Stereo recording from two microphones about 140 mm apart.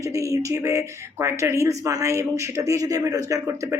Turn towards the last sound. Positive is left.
turn(degrees=-20)  # may be behind; listen again after turning